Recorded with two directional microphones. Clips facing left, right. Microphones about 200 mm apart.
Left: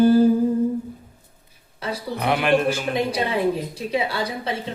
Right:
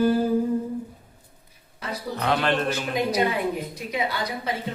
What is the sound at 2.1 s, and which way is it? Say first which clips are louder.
Speech: left 4 dB; 15° left (ahead or behind).